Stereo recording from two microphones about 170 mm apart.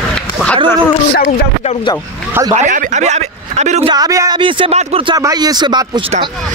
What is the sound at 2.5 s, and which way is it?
Speech, 45° right (ahead or behind).